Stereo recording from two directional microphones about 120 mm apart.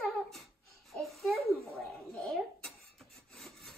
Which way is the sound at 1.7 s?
5° left (ahead or behind).